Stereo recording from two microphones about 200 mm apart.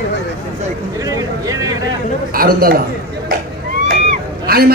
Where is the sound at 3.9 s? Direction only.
45° right (ahead or behind).